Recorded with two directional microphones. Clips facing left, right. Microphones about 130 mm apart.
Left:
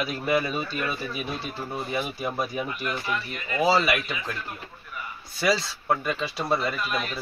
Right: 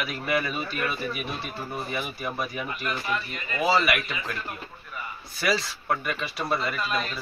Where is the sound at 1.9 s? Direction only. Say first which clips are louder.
Left 3 dB; 20° left (ahead or behind).